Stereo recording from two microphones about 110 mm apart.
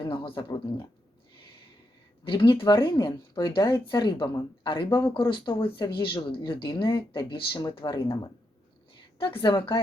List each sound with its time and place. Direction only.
0.0 s speech: 45° left (ahead or behind)
2.2 s speech: 45° left (ahead or behind)
9.1 s speech: 50° left (ahead or behind)